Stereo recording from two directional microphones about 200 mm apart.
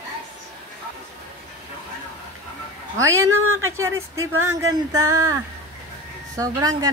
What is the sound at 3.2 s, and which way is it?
Speech, 90° right.